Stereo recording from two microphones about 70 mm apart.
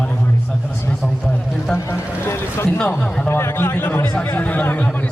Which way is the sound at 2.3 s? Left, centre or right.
Left.